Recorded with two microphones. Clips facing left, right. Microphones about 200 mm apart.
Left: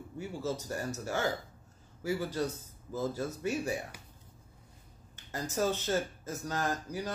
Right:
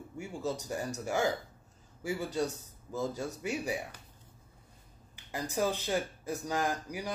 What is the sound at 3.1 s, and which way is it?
Speech, 15° right (ahead or behind).